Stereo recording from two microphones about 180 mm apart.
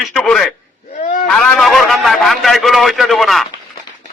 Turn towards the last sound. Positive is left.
turn(degrees=0)  # may be behind; listen again after turning